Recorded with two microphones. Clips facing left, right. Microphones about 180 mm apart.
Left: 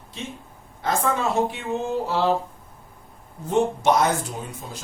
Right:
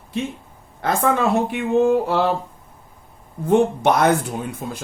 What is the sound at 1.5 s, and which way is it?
Speech, 55° right (ahead or behind).